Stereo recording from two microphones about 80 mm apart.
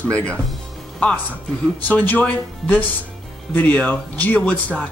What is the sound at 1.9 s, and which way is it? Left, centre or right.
Speech, centre.